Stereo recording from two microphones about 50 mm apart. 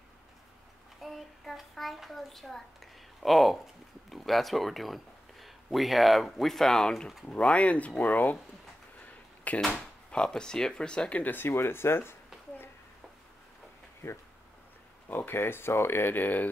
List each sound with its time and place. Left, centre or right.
1.0 s a sound: centre
4.1 s speech: centre
7.2 s speech: left
9.5 s speech: left
10.1 s speech: centre
11.1 s speech: left
15.0 s speech: left